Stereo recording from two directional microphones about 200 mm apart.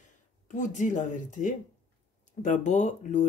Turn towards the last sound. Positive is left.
turn(degrees=35)  # may be behind; listen again after turning